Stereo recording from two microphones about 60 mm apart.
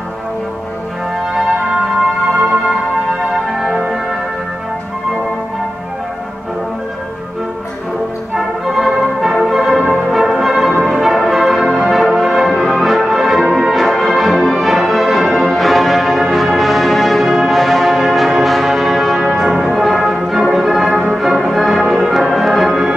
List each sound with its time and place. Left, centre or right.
8.4 s music: centre